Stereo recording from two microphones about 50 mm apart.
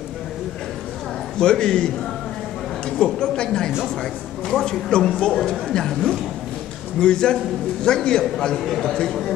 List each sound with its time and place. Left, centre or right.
1.4 s a man's voice: centre
3.0 s a man's voice: centre
7.0 s a man's voice: centre